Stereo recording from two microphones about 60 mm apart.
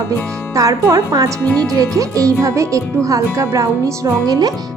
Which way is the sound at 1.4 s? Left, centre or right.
Left.